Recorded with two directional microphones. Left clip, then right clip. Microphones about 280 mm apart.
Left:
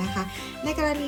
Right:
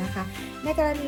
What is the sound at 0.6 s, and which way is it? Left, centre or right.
Speech, centre.